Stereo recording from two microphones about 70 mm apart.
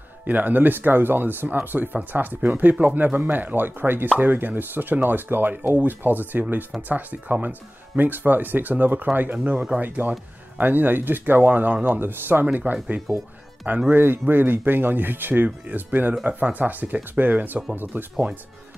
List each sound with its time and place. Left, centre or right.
0.3 s speech: right